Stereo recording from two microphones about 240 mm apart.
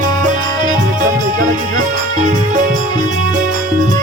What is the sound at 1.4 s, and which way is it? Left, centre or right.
Music, right.